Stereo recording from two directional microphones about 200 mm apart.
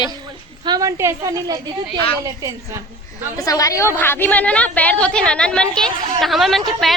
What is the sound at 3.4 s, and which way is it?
A woman's voice, 15° left (ahead or behind).